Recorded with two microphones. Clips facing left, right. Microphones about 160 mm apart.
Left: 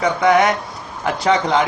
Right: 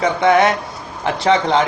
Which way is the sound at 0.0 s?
30° right (ahead or behind).